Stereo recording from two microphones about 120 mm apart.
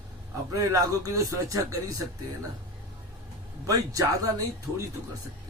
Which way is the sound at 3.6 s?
30° right (ahead or behind).